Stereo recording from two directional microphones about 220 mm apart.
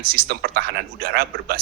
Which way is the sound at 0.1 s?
45° right (ahead or behind).